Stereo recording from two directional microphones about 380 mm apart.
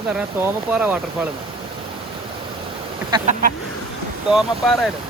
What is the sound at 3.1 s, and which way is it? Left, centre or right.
Speech, centre.